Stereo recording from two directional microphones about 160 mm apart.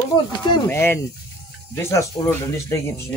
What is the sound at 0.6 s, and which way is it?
Speech, 15° left (ahead or behind).